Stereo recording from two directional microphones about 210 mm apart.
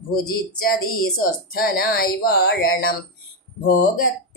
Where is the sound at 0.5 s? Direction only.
45° left (ahead or behind).